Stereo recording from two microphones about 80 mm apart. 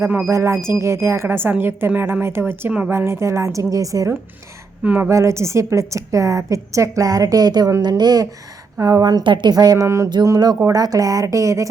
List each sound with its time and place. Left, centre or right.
0.3 s speech: right
4.8 s speech: centre
5.0 s a woman's voice: right
9.2 s a woman's voice: right
9.6 s a woman's voice: right
9.8 s speech: right
10.2 s a woman's voice: right